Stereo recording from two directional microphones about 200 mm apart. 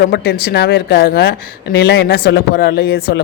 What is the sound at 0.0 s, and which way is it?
Speech, 55° left (ahead or behind).